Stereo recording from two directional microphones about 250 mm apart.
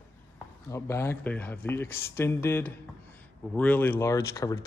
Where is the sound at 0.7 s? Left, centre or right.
Centre.